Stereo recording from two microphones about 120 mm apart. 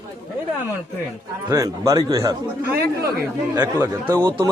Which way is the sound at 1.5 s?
30° right (ahead or behind).